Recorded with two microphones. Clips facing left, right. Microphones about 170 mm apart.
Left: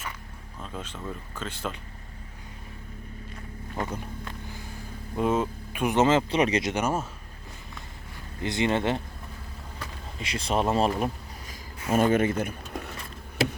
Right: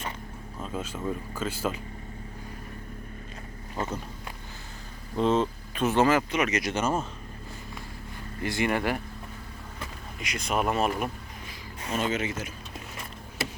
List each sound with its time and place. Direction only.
0.6 s speech: 5° right (ahead or behind)
5.1 s speech: 10° left (ahead or behind); by 6.7 s 30° left (ahead or behind)
6.7 s speech: 15° left (ahead or behind)
8.4 s speech: 20° left (ahead or behind)
10.2 s speech: 30° left (ahead or behind)
11.9 s speech: 50° left (ahead or behind)